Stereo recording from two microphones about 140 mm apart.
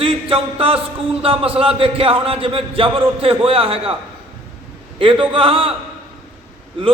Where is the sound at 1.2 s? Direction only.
40° right (ahead or behind).